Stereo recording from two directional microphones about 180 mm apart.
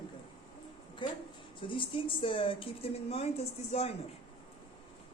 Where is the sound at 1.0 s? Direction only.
25° left (ahead or behind).